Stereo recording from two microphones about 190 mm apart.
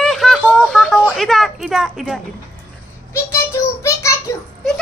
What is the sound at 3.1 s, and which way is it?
Child singing, 15° left (ahead or behind).